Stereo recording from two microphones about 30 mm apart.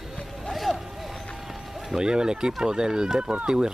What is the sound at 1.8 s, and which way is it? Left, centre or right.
Speech, right.